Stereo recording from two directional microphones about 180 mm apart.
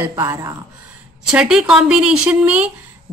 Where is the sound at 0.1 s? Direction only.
20° right (ahead or behind).